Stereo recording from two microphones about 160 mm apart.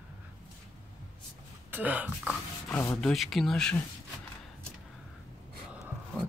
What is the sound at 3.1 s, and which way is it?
Speech, centre (ahead or behind).